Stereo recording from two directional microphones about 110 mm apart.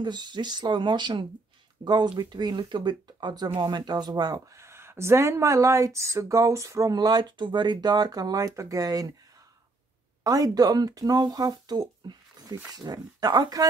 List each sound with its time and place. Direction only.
0.0 s speech: 40° right (ahead or behind)
10.2 s speech: 35° right (ahead or behind)